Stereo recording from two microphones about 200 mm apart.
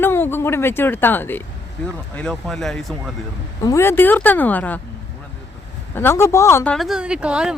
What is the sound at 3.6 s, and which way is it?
Speech, 15° left (ahead or behind).